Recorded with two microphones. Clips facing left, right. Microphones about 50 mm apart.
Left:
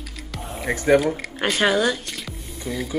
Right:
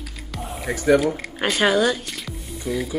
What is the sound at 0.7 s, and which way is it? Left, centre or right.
Speech, left.